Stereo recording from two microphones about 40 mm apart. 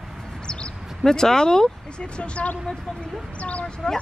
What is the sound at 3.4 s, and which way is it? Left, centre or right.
Dog, left.